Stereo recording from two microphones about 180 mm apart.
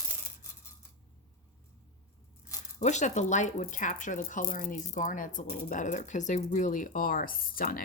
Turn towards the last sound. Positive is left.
turn(degrees=55)  # may be behind; listen again after turning